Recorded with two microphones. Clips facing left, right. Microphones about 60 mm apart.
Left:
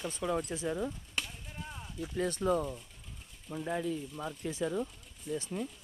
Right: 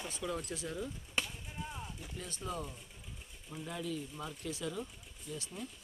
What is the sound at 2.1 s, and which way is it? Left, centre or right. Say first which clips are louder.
Speech: left 12 dB; left.